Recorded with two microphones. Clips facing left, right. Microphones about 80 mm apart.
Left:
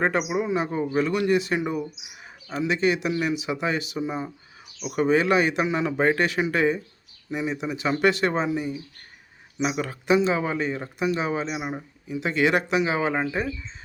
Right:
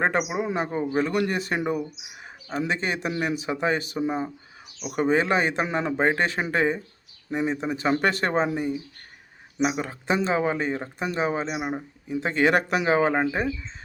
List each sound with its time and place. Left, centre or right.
0.0 s speech: right
9.6 s speech: right